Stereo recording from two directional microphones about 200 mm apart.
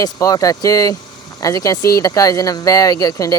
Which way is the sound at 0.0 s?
15° left (ahead or behind).